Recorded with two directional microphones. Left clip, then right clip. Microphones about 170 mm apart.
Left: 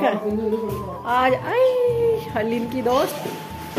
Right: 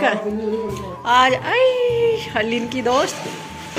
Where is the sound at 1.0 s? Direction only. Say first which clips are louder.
Right 4 dB; centre (ahead or behind).